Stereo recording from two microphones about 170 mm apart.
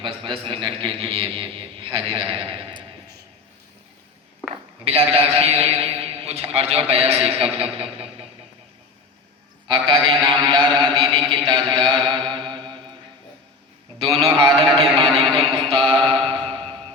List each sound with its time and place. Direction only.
0.0 s a man's voice: 30° right (ahead or behind)
4.5 s a man's voice: 35° right (ahead or behind)
9.6 s a man's voice: 30° right (ahead or behind)
10.9 s mantra: 30° right (ahead or behind)
14.0 s mantra: 30° right (ahead or behind)
16.0 s music: 35° right (ahead or behind)